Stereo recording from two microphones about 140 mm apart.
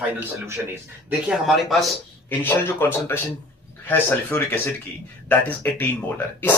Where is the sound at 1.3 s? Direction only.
Centre (ahead or behind).